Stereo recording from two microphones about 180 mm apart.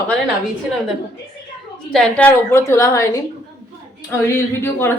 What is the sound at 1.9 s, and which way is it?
Speech, 5° left (ahead or behind).